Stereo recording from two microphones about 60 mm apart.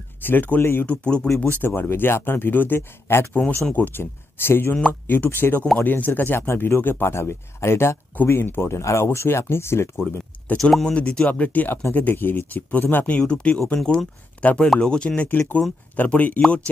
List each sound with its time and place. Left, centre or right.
0.2 s speech: left
0.8 s speech: centre
1.8 s speech: left
3.3 s speech: left
4.0 s speech: left
6.4 s speech: left
7.2 s speech: left
10.6 s speech: centre
11.0 s speech: left
13.2 s speech: centre
16.3 s speech: centre